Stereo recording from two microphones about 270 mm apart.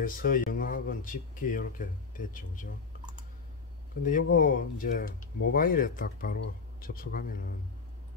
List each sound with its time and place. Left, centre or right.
0.0 s speech: left
4.0 s speech: left